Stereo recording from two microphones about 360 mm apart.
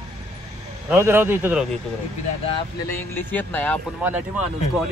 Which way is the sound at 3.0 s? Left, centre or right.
Centre.